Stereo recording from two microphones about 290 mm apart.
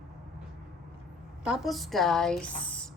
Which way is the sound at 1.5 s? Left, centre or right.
Centre.